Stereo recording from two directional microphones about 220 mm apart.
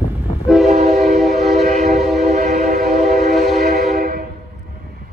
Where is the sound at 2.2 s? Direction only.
30° right (ahead or behind).